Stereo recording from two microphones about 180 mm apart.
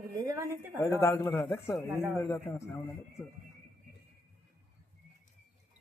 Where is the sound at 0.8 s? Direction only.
15° left (ahead or behind).